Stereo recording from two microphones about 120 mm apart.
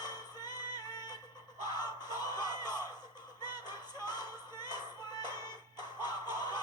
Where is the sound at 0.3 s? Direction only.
35° left (ahead or behind).